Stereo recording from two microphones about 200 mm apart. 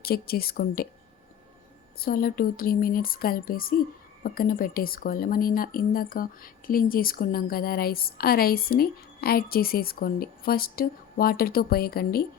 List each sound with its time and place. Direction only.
0.0 s speech: 50° left (ahead or behind)
2.0 s speech: 45° left (ahead or behind)